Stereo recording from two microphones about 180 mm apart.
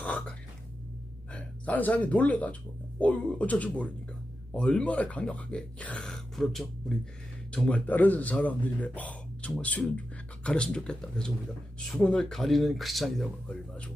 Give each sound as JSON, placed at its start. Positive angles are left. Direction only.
{"t": 0.0, "sound": "throat clearing", "side_deg": 10}
{"t": 1.3, "sound": "a man's voice", "side_deg": 5}